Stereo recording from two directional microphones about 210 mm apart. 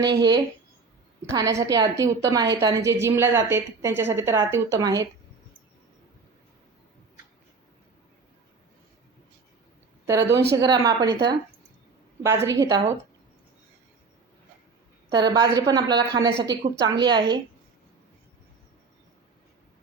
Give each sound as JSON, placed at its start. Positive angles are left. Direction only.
{"t": 0.0, "sound": "a woman's voice", "side_deg": -20}
{"t": 10.1, "sound": "a woman's voice", "side_deg": -15}
{"t": 15.3, "sound": "speech", "side_deg": -20}